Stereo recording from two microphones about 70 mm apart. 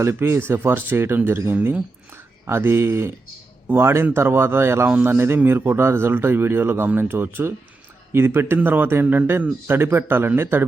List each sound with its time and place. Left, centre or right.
0.0 s a man's voice: right